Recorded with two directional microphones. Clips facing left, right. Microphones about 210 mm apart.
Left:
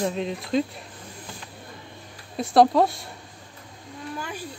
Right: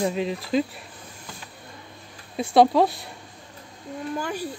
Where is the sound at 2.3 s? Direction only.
Centre (ahead or behind).